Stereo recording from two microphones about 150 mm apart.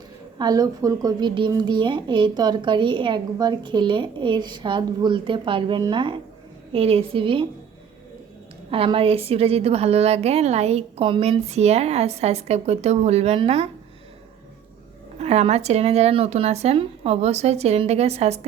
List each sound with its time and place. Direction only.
0.3 s a child's voice: 25° right (ahead or behind)
8.7 s a woman's voice: 35° right (ahead or behind)
15.2 s a woman's voice: 45° right (ahead or behind)